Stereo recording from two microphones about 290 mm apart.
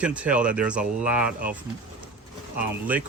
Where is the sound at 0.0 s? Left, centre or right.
Centre.